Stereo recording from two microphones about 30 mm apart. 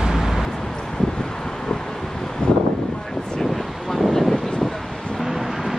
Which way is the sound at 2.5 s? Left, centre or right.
Left.